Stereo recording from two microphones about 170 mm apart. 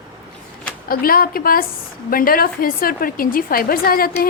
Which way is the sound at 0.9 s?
60° left (ahead or behind).